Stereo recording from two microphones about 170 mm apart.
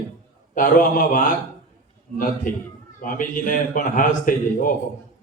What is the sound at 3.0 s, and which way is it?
A man's voice, 55° left (ahead or behind).